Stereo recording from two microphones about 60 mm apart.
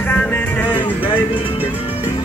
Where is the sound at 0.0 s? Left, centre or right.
Left.